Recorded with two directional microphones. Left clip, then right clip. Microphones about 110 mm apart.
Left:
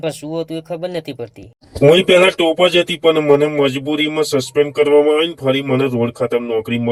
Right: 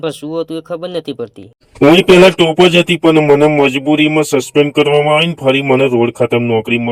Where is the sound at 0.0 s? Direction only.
20° right (ahead or behind).